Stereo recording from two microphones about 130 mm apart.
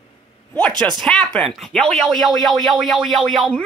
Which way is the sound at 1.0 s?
5° left (ahead or behind).